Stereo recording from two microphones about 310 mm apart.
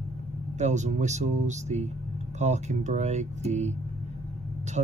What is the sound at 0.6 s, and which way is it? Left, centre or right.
Speech, right.